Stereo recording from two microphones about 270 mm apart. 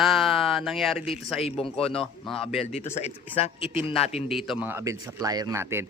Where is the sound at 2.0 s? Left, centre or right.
Centre.